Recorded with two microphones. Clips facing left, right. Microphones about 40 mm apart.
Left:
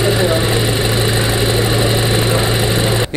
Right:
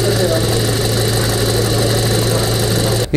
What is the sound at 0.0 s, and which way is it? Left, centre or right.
Vehicle, left.